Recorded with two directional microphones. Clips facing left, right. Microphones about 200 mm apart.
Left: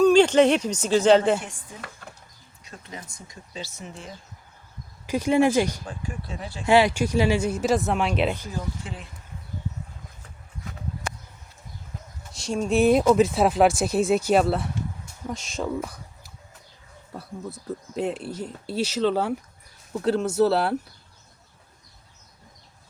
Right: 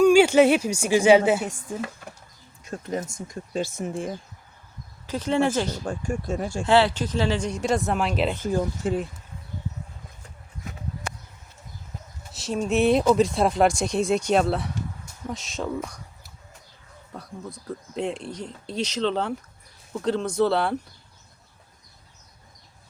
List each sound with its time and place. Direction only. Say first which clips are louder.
0.0 s speech: right 1 dB; 10° right (ahead or behind)
2.6 s speech: right 11 dB; 45° right (ahead or behind)
5.0 s speech: left 3 dB; 10° left (ahead or behind)
5.8 s speech: right 7 dB; 50° right (ahead or behind)
6.7 s speech: left 1 dB; 10° left (ahead or behind)
8.4 s speech: right 8 dB; 45° right (ahead or behind)
12.3 s speech: left 1 dB; 5° right (ahead or behind)
17.2 s speech: left 2 dB; 5° left (ahead or behind)